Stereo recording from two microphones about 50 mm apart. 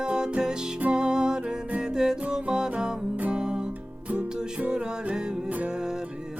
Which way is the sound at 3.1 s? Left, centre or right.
Right.